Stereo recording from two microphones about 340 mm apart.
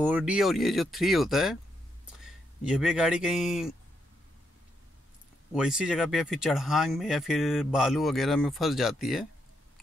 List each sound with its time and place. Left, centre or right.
0.0 s speech: centre
5.5 s speech: centre